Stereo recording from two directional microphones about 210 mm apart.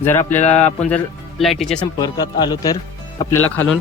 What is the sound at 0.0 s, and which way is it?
Speech, 10° left (ahead or behind).